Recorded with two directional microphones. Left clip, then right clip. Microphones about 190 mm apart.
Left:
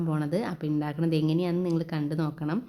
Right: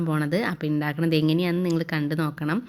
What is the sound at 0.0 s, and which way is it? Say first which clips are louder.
Speech: right 4 dB; 15° right (ahead or behind).